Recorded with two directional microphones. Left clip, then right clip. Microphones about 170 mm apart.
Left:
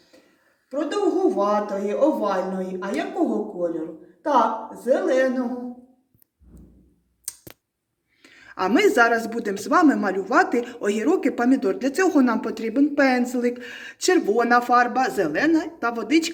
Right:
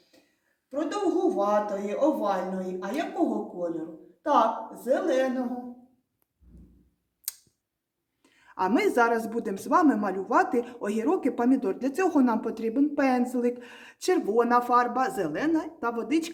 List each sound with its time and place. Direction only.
0.7 s a woman's voice: 5° left (ahead or behind)
7.3 s a sound: centre (ahead or behind)
8.2 s a woman's voice: 25° right (ahead or behind)